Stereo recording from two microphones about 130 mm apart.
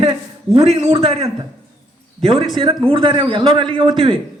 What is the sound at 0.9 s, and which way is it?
Speech, 50° right (ahead or behind).